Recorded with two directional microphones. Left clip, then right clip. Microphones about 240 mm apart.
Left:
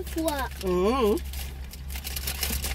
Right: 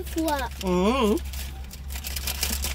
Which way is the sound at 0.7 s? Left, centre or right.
Right.